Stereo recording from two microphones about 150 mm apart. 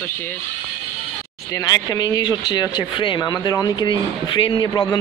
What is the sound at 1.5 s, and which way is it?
Speech, 25° left (ahead or behind).